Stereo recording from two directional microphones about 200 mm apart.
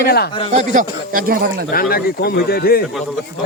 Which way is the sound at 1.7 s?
50° left (ahead or behind).